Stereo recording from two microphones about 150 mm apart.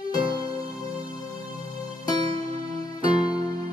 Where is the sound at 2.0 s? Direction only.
25° left (ahead or behind).